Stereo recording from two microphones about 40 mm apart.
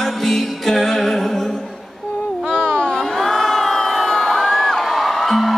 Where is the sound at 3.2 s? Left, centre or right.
Centre.